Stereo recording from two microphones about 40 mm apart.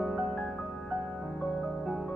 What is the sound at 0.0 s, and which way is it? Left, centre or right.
Music, centre.